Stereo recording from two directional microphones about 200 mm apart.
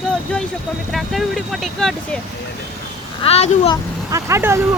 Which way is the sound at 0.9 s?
Centre (ahead or behind).